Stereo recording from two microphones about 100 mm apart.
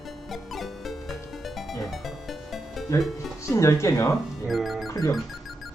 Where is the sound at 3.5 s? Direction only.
30° left (ahead or behind).